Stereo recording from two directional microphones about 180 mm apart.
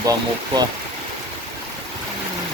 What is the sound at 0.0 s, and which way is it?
Speech, 20° right (ahead or behind).